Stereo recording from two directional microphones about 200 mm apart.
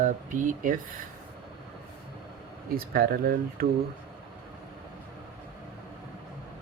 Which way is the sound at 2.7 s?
50° right (ahead or behind).